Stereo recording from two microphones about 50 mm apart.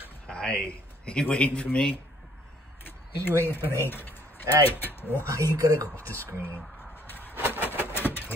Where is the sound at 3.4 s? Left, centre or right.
Left.